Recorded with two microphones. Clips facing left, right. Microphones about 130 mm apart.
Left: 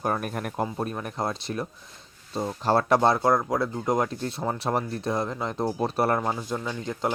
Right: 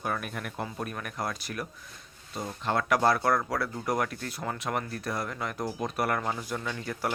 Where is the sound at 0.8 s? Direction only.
30° left (ahead or behind).